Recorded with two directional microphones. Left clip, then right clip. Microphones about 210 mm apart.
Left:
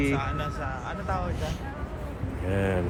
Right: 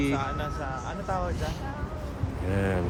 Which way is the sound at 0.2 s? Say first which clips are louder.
Even; 40° right (ahead or behind).